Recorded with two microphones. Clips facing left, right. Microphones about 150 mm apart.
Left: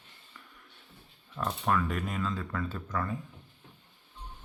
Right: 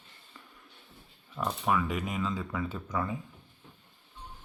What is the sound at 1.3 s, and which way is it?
Speech, 5° right (ahead or behind).